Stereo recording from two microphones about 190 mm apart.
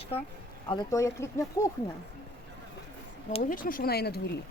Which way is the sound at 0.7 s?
20° left (ahead or behind).